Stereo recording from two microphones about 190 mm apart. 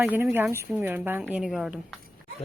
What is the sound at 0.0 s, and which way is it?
A woman's voice, 10° right (ahead or behind).